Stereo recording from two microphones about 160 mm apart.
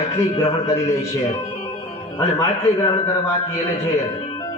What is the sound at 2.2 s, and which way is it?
Speech, 20° left (ahead or behind).